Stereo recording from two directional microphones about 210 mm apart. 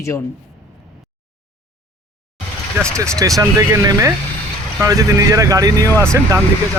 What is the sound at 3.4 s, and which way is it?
Speech, 15° right (ahead or behind).